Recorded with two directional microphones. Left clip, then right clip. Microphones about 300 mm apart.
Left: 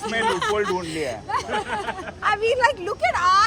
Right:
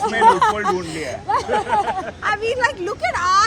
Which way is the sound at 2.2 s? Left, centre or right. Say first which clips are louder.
Left 1 dB; left.